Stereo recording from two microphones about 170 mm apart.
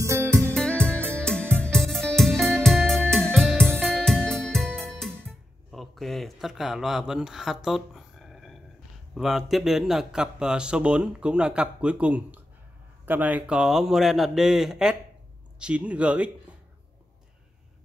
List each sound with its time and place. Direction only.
0.0 s music: 15° right (ahead or behind)
0.6 s music: 5° left (ahead or behind)
9.1 s a man's voice: centre (ahead or behind)